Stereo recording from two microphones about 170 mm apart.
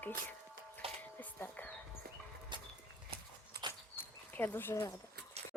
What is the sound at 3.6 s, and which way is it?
Dog, 70° right (ahead or behind).